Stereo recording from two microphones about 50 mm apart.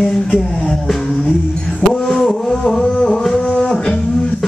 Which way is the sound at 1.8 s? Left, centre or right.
Centre.